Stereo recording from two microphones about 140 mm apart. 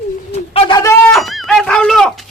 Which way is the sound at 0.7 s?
25° left (ahead or behind).